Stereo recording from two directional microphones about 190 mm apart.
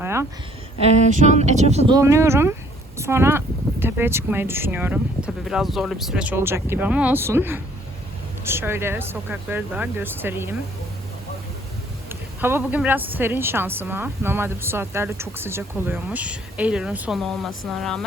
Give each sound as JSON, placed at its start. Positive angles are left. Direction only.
{"t": 0.0, "sound": "a sound", "side_deg": -15}
{"t": 1.2, "sound": "speech", "side_deg": -40}
{"t": 1.9, "sound": "a woman's voice", "side_deg": -15}
{"t": 12.0, "sound": "a woman's voice", "side_deg": -10}